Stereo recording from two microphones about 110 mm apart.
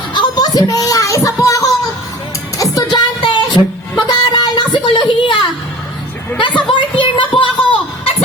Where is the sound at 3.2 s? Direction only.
45° left (ahead or behind).